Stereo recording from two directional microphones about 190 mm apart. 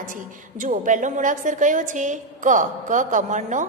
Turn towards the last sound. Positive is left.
turn(degrees=-40)  # may be behind; listen again after turning